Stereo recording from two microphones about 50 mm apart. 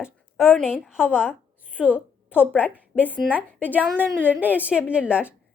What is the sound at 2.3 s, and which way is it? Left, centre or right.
Speech, left.